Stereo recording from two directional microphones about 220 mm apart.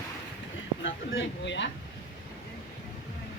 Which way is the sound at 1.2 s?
55° left (ahead or behind).